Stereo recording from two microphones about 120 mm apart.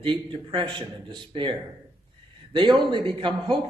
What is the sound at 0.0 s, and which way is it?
A man's voice, 45° right (ahead or behind).